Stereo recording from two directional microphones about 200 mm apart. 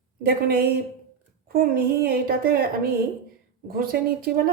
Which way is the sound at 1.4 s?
45° right (ahead or behind).